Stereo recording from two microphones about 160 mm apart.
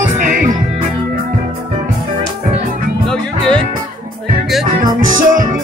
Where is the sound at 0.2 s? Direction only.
55° right (ahead or behind).